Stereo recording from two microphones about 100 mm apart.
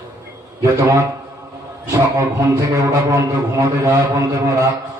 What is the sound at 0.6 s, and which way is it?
A man's voice, 30° right (ahead or behind).